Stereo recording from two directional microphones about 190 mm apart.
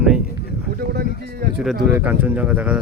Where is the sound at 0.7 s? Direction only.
55° right (ahead or behind).